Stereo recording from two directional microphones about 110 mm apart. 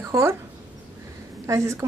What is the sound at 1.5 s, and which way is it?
Speech, 25° right (ahead or behind).